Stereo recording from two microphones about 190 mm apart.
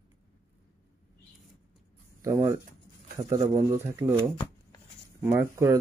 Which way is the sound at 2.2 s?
15° right (ahead or behind).